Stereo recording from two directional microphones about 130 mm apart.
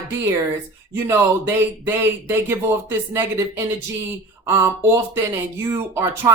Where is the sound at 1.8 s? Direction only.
15° right (ahead or behind).